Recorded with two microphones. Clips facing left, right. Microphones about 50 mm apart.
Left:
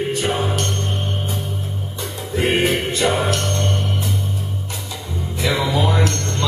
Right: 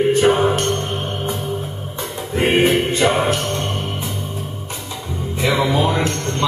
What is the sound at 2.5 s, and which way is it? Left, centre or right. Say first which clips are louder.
Music: right 4 dB; centre.